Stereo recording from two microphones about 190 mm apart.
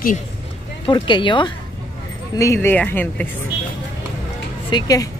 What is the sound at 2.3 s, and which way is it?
Speech, 15° left (ahead or behind).